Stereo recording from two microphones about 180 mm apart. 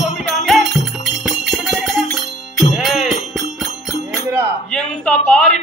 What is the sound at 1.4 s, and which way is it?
Jingle bell, centre (ahead or behind).